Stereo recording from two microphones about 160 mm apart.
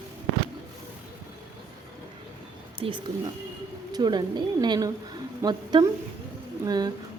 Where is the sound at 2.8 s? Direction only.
35° right (ahead or behind).